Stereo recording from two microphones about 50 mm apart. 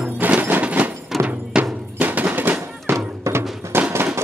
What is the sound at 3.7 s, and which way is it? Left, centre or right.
Fireworks, right.